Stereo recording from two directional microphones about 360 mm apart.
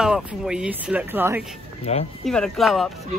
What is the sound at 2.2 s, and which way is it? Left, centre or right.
Speech, centre.